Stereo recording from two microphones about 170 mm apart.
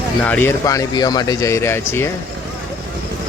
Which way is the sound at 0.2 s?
10° left (ahead or behind).